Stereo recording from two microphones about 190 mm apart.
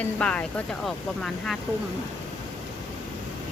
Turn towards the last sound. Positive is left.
turn(degrees=0)  # may be behind; listen again after turning